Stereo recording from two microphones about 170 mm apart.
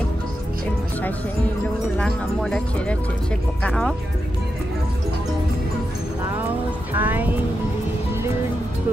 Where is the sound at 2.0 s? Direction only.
5° left (ahead or behind).